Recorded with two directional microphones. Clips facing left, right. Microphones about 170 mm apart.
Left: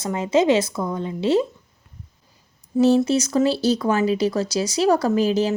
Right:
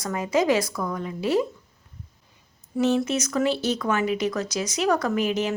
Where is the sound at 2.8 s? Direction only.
35° left (ahead or behind).